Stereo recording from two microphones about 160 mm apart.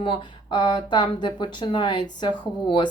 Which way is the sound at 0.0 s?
30° left (ahead or behind).